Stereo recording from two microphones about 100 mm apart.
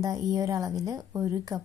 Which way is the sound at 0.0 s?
35° right (ahead or behind).